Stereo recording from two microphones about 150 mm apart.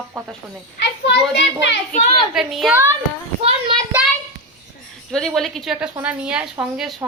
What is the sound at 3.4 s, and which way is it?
Speech, 35° right (ahead or behind).